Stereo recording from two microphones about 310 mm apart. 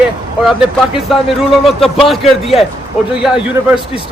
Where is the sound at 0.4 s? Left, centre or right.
Centre.